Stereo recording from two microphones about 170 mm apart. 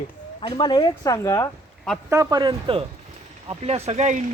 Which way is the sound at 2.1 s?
20° right (ahead or behind).